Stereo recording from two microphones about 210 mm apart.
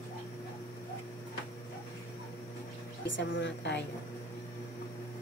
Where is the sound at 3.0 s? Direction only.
60° left (ahead or behind).